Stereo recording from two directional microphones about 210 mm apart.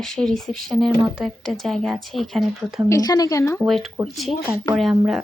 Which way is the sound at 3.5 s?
Centre (ahead or behind).